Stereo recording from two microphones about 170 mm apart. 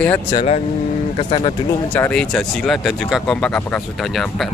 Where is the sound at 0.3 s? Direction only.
40° left (ahead or behind).